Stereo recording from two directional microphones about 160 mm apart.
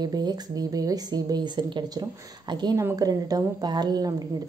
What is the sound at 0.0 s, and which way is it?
Speech, 25° right (ahead or behind).